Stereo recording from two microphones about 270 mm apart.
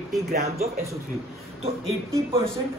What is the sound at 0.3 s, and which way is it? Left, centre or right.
Speech, right.